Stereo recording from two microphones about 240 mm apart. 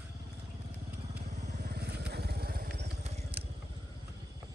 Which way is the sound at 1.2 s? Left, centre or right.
Right.